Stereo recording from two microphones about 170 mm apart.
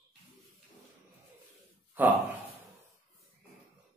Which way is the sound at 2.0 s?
10° right (ahead or behind).